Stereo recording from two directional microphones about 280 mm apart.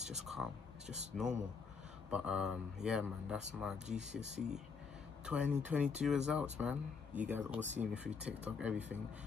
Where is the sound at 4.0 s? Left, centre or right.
Right.